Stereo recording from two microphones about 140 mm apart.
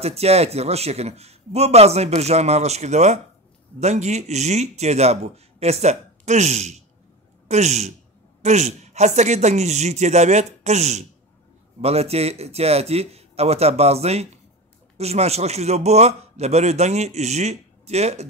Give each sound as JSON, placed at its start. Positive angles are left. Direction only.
{"t": 0.0, "sound": "a man's voice", "side_deg": -50}